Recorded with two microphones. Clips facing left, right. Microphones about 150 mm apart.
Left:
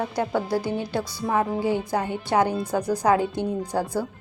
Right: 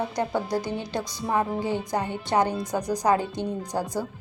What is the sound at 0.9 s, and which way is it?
Speech, 15° right (ahead or behind).